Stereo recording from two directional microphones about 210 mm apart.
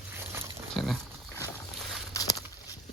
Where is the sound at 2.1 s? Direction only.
15° left (ahead or behind).